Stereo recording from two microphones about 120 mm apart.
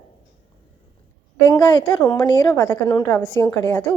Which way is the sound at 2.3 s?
40° left (ahead or behind).